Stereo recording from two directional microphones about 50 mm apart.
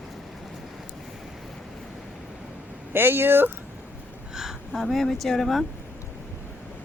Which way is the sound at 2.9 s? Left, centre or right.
Right.